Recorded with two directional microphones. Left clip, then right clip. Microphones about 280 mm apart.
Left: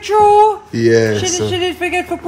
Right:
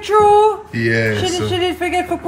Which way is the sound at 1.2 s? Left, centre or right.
Centre.